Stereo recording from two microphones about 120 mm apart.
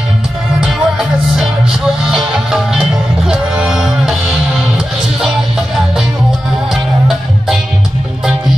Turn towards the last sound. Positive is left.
turn(degrees=0)  # may be behind; listen again after turning